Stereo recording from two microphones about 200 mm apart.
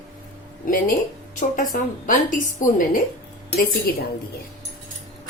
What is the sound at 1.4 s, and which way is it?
A woman's voice, 40° left (ahead or behind).